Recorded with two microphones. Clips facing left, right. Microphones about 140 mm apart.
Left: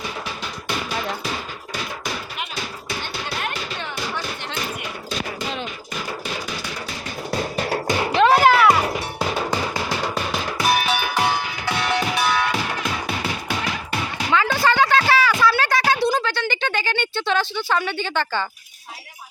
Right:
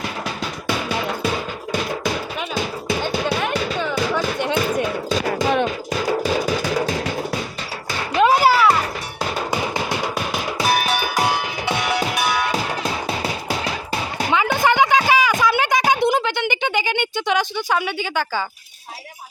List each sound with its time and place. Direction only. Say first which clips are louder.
5.4 s music: right 10 dB; 75° right (ahead or behind)
6.7 s music: right 11 dB; 90° right
7.9 s music: even; 20° left (ahead or behind)
8.2 s music: even; 5° right (ahead or behind)
9.5 s music: right 1 dB; 15° right (ahead or behind)
12.5 s music: right 2 dB; 35° right (ahead or behind)
14.3 s a sound: right 1 dB; 20° right (ahead or behind)